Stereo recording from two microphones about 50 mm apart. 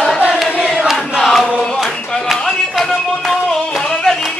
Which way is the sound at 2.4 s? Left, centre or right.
Centre.